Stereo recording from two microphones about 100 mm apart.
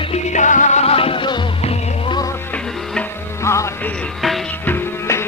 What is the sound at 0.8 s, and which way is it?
Music, 80° left.